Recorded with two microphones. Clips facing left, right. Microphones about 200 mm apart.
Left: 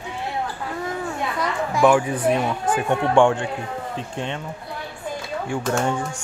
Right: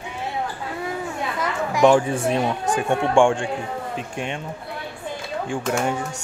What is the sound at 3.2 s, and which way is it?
Speech, 15° right (ahead or behind).